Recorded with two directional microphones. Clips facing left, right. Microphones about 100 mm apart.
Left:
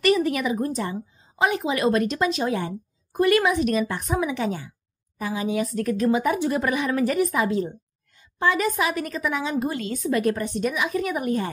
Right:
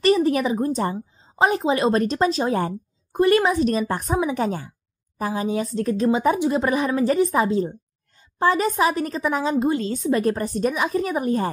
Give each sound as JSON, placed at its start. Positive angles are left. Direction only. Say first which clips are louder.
{"t": 0.0, "sound": "speech", "louder": "right 3 dB", "side_deg": -35}
{"t": 3.1, "sound": "a woman's voice", "louder": "right 2 dB", "side_deg": -30}